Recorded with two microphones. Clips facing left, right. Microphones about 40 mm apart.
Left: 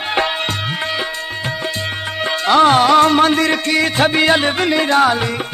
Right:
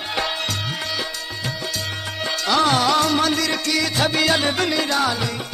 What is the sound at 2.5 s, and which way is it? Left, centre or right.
Music, left.